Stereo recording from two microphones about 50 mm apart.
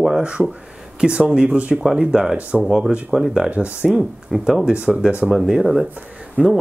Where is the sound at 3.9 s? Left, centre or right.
Centre.